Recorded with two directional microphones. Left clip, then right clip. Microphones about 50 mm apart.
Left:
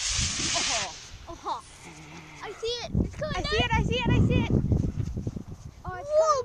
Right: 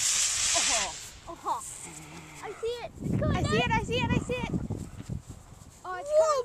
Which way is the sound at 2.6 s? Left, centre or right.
Left.